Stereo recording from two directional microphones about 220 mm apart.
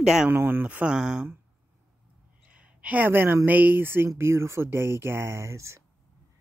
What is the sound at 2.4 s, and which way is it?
Speech, 5° right (ahead or behind).